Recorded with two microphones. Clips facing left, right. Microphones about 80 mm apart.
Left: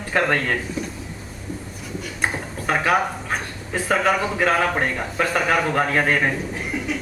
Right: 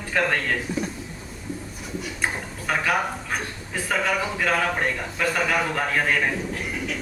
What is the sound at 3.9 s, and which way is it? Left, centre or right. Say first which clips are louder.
A man's voice: left 4 dB; left.